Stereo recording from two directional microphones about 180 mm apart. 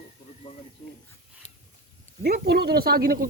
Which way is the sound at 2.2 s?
60° right (ahead or behind).